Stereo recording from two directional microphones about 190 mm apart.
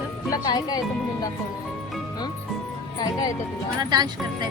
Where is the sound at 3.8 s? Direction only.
20° right (ahead or behind).